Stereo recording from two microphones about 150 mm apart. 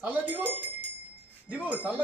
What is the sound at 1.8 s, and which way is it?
Wind chime, 10° left (ahead or behind).